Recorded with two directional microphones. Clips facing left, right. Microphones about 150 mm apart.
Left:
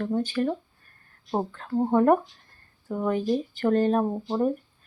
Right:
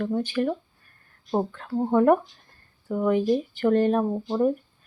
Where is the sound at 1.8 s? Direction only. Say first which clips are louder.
Right 1 dB; 15° left (ahead or behind).